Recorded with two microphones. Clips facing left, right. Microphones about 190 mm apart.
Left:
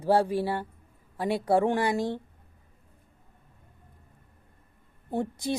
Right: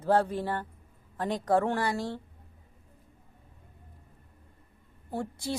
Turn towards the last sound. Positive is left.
turn(degrees=20)  # may be behind; listen again after turning